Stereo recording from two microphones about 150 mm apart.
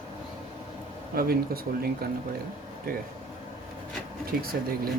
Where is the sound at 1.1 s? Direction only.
85° right.